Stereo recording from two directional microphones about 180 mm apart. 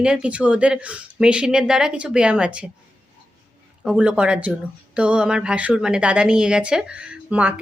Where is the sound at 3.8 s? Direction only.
5° right (ahead or behind).